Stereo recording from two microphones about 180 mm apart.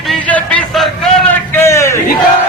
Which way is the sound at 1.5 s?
15° left (ahead or behind).